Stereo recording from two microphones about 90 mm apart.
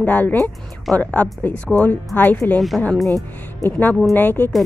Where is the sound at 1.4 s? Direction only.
15° left (ahead or behind).